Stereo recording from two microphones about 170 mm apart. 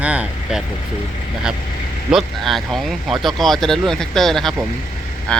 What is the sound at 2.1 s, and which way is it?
Speech, centre (ahead or behind).